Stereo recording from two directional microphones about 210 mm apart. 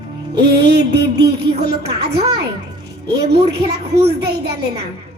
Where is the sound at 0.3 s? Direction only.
50° right (ahead or behind).